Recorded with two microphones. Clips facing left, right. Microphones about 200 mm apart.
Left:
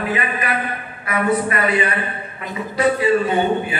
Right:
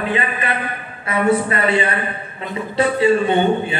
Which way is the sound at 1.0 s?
30° right (ahead or behind).